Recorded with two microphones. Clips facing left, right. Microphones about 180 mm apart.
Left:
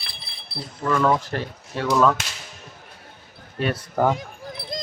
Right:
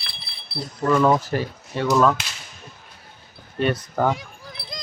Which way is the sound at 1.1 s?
5° right (ahead or behind).